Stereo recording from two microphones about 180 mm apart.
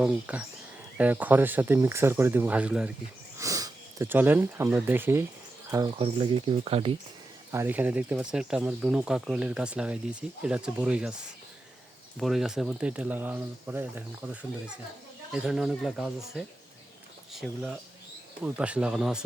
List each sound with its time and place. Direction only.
0.0 s speech: 10° right (ahead or behind)
3.3 s speech: 20° right (ahead or behind)
5.7 s speech: 25° right (ahead or behind)
7.5 s speech: 10° right (ahead or behind)
12.2 s speech: centre (ahead or behind)
15.3 s speech: 5° right (ahead or behind)